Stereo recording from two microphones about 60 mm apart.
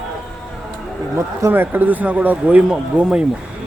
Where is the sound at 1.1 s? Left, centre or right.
Right.